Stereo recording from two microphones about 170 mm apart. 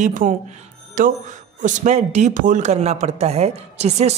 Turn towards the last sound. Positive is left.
turn(degrees=-40)  # may be behind; listen again after turning